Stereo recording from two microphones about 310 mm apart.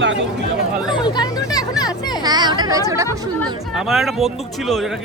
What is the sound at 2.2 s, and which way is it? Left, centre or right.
Speech, centre.